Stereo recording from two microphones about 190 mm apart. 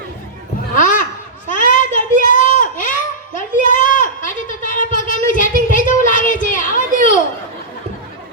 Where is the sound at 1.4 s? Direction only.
45° left (ahead or behind).